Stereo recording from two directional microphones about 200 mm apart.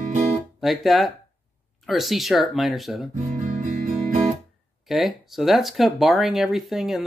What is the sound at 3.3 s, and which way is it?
Music, 40° right (ahead or behind).